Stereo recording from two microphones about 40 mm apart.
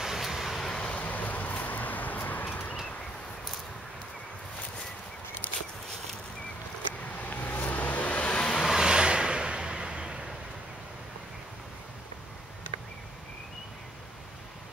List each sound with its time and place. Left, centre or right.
0.0 s vehicle: centre
0.8 s vehicle: left
7.1 s vehicle: left
8.3 s vehicle: left
8.7 s vehicle: right